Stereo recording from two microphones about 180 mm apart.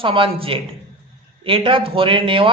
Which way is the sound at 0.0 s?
30° right (ahead or behind).